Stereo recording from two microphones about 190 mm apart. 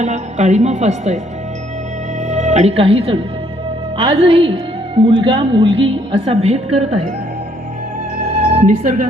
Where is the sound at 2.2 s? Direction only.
35° right (ahead or behind).